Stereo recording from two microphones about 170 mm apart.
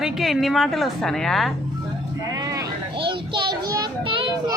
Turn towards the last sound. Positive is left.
turn(degrees=-30)  # may be behind; listen again after turning